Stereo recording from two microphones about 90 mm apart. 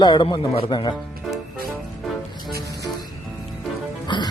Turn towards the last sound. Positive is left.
turn(degrees=55)  # may be behind; listen again after turning